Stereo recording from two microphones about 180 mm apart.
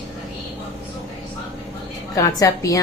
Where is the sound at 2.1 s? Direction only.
20° left (ahead or behind).